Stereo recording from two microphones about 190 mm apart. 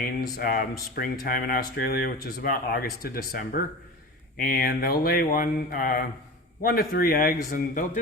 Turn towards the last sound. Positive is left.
turn(degrees=45)  # may be behind; listen again after turning